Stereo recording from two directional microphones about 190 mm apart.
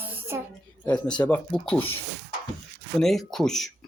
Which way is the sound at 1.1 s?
5° left (ahead or behind).